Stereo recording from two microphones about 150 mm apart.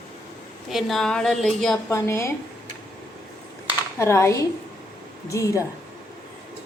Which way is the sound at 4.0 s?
20° left (ahead or behind).